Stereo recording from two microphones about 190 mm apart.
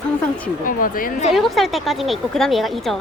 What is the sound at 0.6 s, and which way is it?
Speech, 45° left (ahead or behind).